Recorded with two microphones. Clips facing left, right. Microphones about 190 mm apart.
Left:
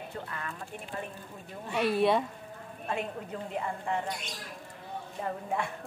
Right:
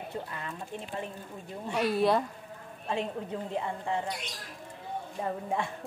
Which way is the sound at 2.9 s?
25° right (ahead or behind).